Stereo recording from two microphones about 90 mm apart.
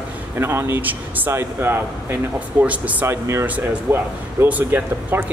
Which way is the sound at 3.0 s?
30° right (ahead or behind).